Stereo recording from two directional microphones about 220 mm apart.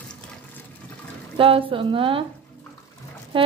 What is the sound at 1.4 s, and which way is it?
Speech, 25° right (ahead or behind).